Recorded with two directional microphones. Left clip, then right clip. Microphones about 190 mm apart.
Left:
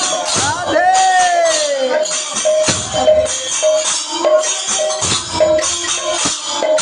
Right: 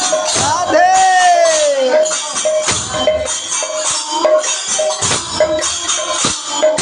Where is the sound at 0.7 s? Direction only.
Centre (ahead or behind).